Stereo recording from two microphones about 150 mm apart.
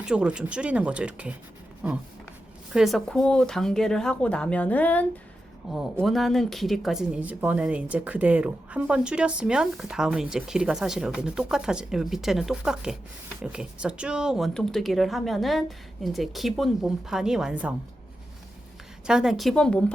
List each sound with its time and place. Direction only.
0.0 s speech: 5° right (ahead or behind)
19.0 s speech: 5° right (ahead or behind)